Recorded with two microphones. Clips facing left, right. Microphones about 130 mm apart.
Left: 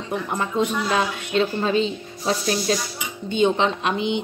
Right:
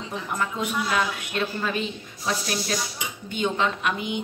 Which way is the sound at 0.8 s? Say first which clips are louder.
Left 3 dB; 25° left (ahead or behind).